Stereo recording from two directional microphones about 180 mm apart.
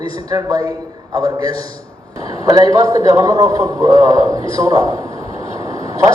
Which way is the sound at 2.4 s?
20° right (ahead or behind).